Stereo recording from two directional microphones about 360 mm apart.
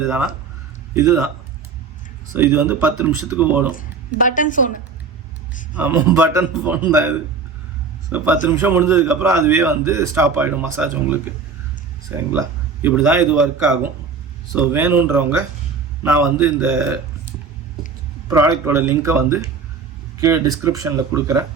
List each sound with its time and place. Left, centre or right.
0.0 s a man's voice: centre
2.3 s a man's voice: centre
3.8 s a woman's voice: left
5.7 s a man's voice: centre